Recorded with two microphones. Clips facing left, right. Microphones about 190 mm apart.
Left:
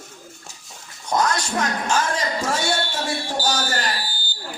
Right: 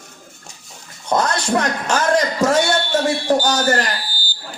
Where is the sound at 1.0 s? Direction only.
60° right (ahead or behind).